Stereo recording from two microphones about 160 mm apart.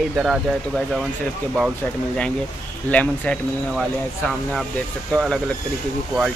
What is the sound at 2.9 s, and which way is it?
Speech, 10° left (ahead or behind).